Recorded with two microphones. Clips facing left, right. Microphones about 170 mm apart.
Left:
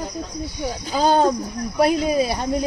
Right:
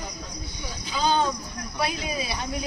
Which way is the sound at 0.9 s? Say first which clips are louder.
Left 7 dB; 45° left (ahead or behind).